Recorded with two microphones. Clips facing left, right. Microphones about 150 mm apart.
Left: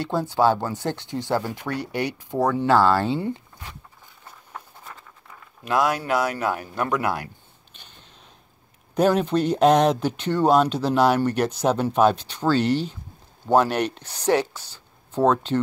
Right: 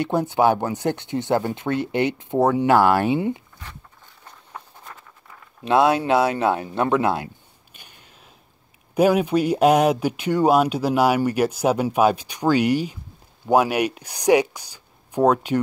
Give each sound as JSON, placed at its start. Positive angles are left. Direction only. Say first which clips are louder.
{"t": 0.0, "sound": "speech", "louder": "right 2 dB", "side_deg": -20}
{"t": 4.5, "sound": "patter", "louder": "right 1 dB", "side_deg": 0}
{"t": 5.7, "sound": "speech", "louder": "right 5 dB", "side_deg": -25}
{"t": 7.7, "sound": "a sound", "louder": "even", "side_deg": -10}
{"t": 8.9, "sound": "speech", "louder": "right 2 dB", "side_deg": -10}